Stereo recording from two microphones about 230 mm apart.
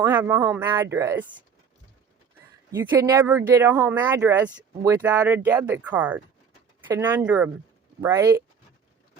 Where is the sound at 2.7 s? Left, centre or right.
Centre.